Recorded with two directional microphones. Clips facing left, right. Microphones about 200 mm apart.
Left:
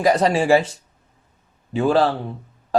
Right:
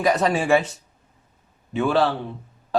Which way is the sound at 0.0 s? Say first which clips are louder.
Left 3 dB; 30° left (ahead or behind).